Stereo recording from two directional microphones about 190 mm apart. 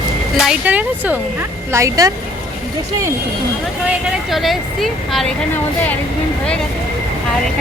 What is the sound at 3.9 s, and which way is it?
Speech, centre (ahead or behind).